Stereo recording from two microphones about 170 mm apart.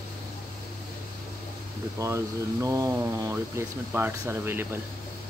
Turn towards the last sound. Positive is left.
turn(degrees=-15)  # may be behind; listen again after turning